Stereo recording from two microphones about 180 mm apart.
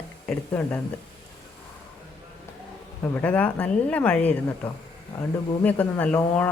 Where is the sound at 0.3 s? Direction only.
5° left (ahead or behind).